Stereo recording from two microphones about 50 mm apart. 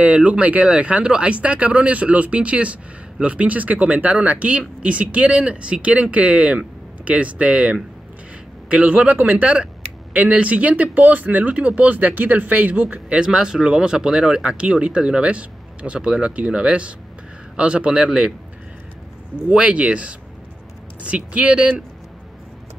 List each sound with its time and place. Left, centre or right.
0.0 s speech: right
19.5 s speech: right